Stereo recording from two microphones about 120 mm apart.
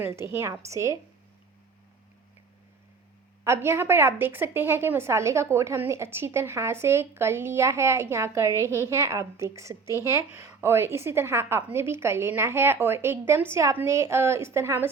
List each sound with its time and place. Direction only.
0.0 s a woman's voice: 20° right (ahead or behind)
3.4 s a woman's voice: 20° right (ahead or behind)